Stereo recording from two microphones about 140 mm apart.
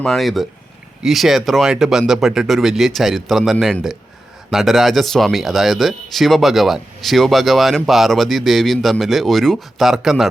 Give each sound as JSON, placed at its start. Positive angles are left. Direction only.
{"t": 0.0, "sound": "speech", "side_deg": 0}